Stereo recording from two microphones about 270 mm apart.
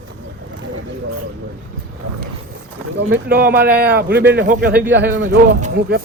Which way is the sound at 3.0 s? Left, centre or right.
Right.